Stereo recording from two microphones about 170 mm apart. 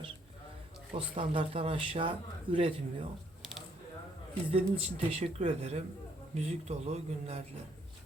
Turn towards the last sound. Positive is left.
turn(degrees=-40)  # may be behind; listen again after turning